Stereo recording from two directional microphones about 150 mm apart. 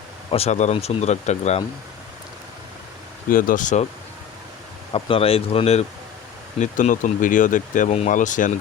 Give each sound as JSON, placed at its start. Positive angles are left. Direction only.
{"t": 0.3, "sound": "speech", "side_deg": 45}
{"t": 3.2, "sound": "speech", "side_deg": 65}
{"t": 4.9, "sound": "speech", "side_deg": 35}
{"t": 6.6, "sound": "speech", "side_deg": 55}